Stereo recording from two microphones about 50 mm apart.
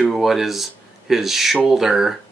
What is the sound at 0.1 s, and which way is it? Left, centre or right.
Speech, centre.